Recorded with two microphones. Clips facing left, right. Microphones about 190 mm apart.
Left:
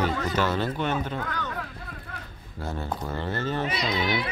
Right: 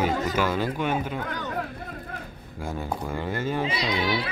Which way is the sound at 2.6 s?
10° right (ahead or behind).